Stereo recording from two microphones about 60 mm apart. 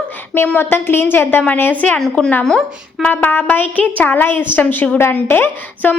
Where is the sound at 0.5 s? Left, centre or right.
Left.